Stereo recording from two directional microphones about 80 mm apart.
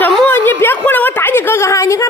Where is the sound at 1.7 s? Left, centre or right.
Left.